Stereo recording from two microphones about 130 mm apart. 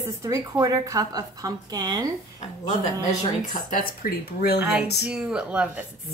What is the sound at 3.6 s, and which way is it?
Speech, 90° left.